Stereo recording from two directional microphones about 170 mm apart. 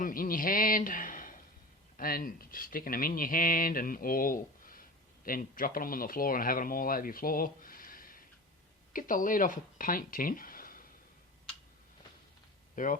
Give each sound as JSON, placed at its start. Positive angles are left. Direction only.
{"t": 0.0, "sound": "a man's voice", "side_deg": 55}
{"t": 12.7, "sound": "speech", "side_deg": 50}